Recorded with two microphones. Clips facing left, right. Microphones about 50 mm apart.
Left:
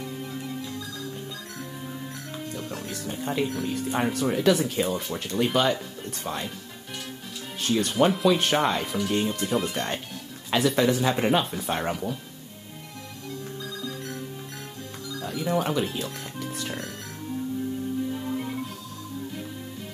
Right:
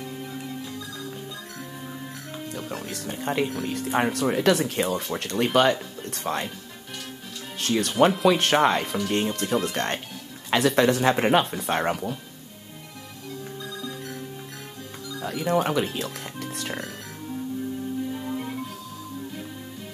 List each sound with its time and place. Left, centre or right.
2.9 s speech: right
7.5 s speech: right
15.2 s speech: right
18.2 s music: centre